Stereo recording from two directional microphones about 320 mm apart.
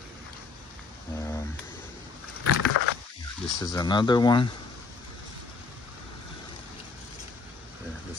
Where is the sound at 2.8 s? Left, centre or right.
Left.